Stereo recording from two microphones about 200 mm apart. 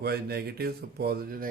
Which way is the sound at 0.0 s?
50° right (ahead or behind).